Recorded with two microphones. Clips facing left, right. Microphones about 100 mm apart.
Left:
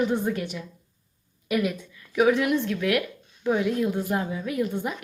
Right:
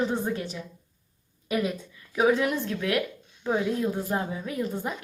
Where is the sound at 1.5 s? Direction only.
30° right (ahead or behind).